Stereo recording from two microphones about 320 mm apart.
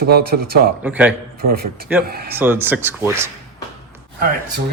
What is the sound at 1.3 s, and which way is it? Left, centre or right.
Speech, right.